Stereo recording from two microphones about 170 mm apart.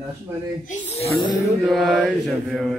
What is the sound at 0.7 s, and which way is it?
Speech, 40° left (ahead or behind).